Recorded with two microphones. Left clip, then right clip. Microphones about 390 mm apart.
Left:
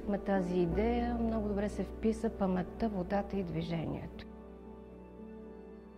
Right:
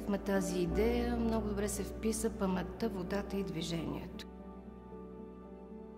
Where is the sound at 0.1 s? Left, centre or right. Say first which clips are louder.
Left 2 dB; left.